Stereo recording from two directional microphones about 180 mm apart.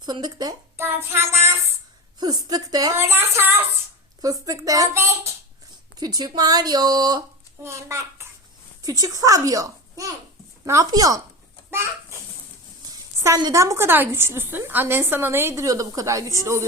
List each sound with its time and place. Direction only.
0.0 s a woman's voice: 25° right (ahead or behind)
12.9 s a woman's voice: 20° right (ahead or behind)